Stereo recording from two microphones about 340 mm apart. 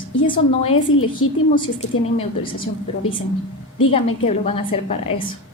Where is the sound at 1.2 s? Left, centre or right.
Left.